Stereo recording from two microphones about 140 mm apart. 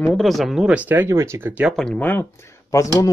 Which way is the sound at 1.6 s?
5° left (ahead or behind).